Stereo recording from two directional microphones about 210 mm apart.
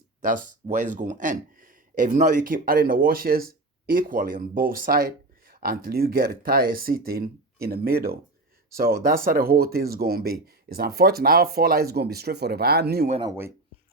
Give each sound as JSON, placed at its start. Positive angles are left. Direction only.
{"t": 0.2, "sound": "speech", "side_deg": -40}
{"t": 13.1, "sound": "speech", "side_deg": -25}